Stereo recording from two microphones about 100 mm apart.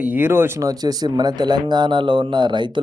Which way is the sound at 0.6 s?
40° right (ahead or behind).